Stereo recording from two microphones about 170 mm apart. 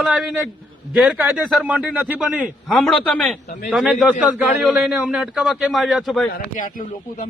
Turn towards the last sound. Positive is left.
turn(degrees=55)  # may be behind; listen again after turning